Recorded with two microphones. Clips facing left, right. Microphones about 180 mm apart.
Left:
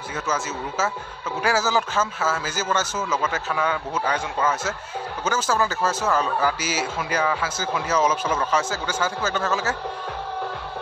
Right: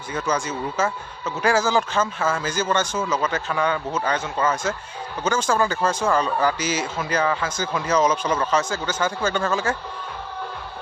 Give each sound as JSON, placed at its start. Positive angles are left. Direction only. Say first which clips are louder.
{"t": 0.1, "sound": "a man's voice", "louder": "right 3 dB", "side_deg": 5}